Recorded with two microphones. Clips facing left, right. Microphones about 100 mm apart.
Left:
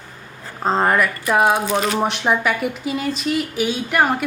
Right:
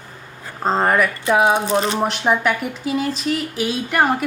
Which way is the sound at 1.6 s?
25° right (ahead or behind).